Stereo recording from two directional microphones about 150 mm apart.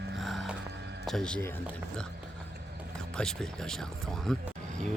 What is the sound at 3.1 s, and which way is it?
Speech, 5° left (ahead or behind).